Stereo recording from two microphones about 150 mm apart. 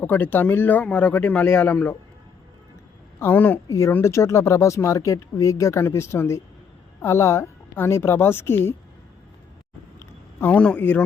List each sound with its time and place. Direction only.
0.0 s speech: 15° left (ahead or behind)
3.2 s speech: 15° left (ahead or behind)
10.0 s a sound: 10° left (ahead or behind)